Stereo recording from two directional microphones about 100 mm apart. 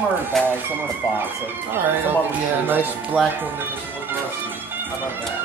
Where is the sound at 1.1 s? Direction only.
20° right (ahead or behind).